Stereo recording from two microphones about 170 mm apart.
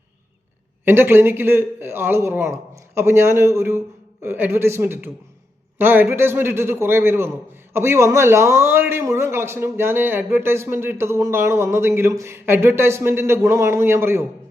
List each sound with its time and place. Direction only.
0.9 s a man's voice: 15° right (ahead or behind)